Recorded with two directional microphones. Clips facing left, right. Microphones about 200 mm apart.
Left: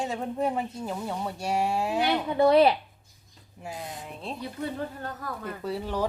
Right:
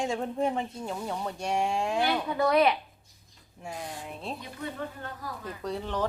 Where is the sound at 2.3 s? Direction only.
25° left (ahead or behind).